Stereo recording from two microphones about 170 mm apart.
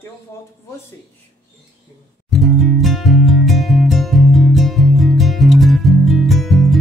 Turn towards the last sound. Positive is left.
turn(degrees=0)  # may be behind; listen again after turning